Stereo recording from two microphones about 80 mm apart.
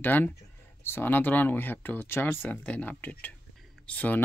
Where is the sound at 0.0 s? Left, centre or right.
Left.